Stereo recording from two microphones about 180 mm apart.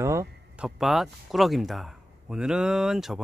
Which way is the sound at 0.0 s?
15° right (ahead or behind).